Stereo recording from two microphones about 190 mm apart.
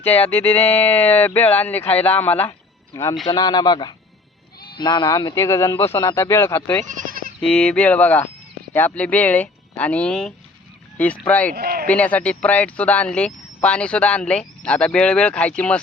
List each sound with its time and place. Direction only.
0.0 s speech: 10° left (ahead or behind)
6.8 s bleat: 45° right (ahead or behind)
7.4 s speech: 5° left (ahead or behind)
11.5 s speech: 55° right (ahead or behind)
11.9 s speech: 10° left (ahead or behind)